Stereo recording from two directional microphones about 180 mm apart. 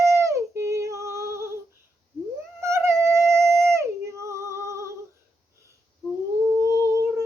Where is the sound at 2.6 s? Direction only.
15° right (ahead or behind).